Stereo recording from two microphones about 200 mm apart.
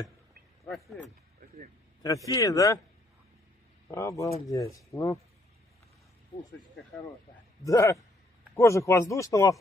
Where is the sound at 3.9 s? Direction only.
15° left (ahead or behind).